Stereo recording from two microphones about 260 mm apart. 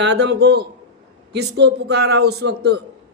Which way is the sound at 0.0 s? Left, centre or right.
Right.